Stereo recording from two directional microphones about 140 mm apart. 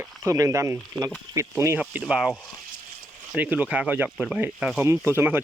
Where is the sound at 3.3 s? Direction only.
10° right (ahead or behind).